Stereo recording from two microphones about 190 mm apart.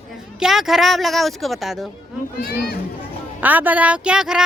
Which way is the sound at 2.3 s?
50° left (ahead or behind).